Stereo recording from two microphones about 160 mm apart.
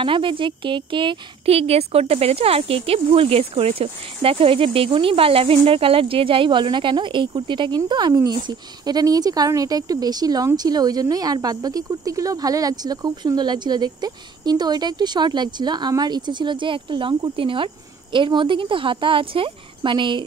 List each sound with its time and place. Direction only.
0.0 s a woman's voice: 30° right (ahead or behind)